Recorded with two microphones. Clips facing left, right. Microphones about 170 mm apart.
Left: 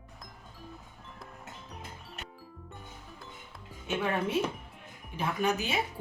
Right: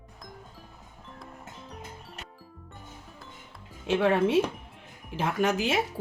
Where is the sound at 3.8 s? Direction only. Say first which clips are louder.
Right 7 dB; 90° right.